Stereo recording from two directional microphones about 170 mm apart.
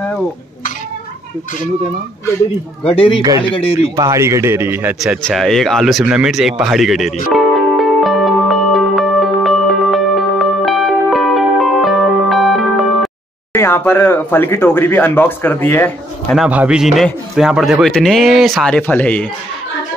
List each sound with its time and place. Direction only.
2.8 s speech: 35° left (ahead or behind)
3.9 s speech: 20° right (ahead or behind)
5.0 s a man's voice: centre (ahead or behind)
7.3 s music: centre (ahead or behind)
13.6 s speech: 15° left (ahead or behind)
16.3 s a man's voice: 5° right (ahead or behind); by 19.2 s 10° left (ahead or behind)